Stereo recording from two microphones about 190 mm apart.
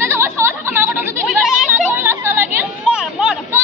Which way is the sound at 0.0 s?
15° right (ahead or behind).